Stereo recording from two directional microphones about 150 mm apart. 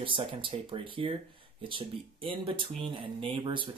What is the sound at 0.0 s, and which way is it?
Speech, 35° right (ahead or behind).